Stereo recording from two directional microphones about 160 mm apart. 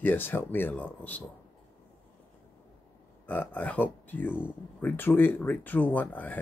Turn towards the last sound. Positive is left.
turn(degrees=10)  # may be behind; listen again after turning